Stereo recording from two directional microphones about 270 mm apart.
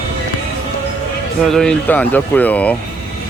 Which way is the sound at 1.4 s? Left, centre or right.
Centre.